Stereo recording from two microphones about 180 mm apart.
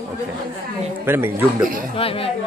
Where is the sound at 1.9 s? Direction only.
30° left (ahead or behind).